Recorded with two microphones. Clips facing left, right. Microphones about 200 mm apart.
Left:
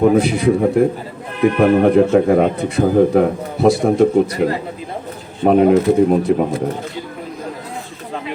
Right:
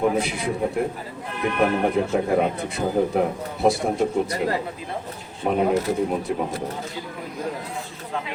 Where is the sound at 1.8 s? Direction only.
70° left (ahead or behind).